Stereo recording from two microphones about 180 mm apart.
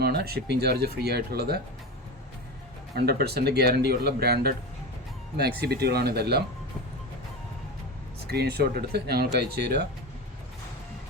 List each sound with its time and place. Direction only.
0.0 s speech: 65° right (ahead or behind)
2.9 s speech: 60° right (ahead or behind)
8.3 s speech: 60° right (ahead or behind)